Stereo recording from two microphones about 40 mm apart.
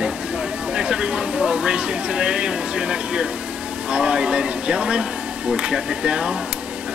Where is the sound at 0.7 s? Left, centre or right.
Right.